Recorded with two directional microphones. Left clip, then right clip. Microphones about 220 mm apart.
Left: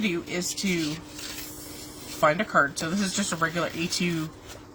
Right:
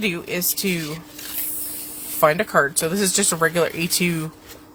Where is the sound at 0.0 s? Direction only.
50° right (ahead or behind).